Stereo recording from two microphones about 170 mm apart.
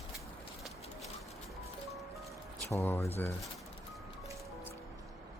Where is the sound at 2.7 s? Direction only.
15° left (ahead or behind).